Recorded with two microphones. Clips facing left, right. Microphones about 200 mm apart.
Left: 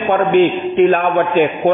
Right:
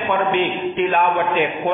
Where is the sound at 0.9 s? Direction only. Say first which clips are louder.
Left 5 dB; 50° left (ahead or behind).